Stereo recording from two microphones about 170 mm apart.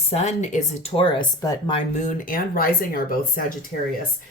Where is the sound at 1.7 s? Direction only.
45° left (ahead or behind); by 2.9 s 60° left (ahead or behind).